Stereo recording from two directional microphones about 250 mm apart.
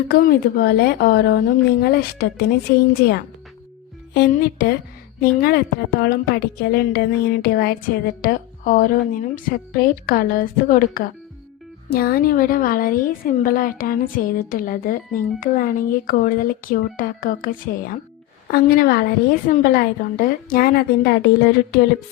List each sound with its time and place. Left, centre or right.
0.1 s a woman's voice: left
4.1 s a woman's voice: left